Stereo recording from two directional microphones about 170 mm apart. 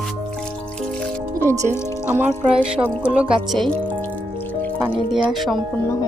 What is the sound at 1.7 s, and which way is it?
Speech, 15° left (ahead or behind).